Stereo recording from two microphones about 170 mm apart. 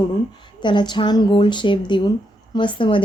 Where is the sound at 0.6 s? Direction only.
25° left (ahead or behind).